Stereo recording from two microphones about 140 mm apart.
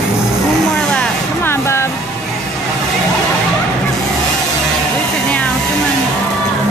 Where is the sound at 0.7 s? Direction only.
10° left (ahead or behind).